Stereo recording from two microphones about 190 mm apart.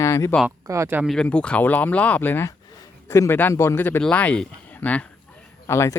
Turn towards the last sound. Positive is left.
turn(degrees=15)  # may be behind; listen again after turning